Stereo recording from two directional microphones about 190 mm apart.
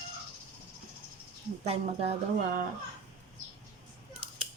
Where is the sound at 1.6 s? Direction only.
35° right (ahead or behind).